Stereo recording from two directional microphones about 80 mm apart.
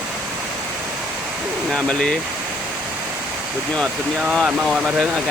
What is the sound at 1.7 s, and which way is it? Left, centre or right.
Speech, centre.